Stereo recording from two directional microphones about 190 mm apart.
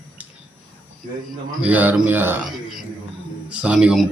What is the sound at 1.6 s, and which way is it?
Speech, 10° right (ahead or behind).